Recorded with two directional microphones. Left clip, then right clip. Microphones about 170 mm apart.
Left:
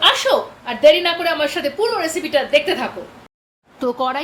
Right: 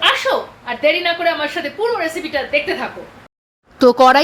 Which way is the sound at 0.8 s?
15° left (ahead or behind).